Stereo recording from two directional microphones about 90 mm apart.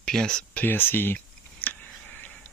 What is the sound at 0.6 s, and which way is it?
Clicking, 25° left (ahead or behind).